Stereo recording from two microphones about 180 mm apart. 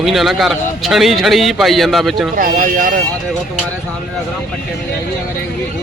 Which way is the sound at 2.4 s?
50° right (ahead or behind).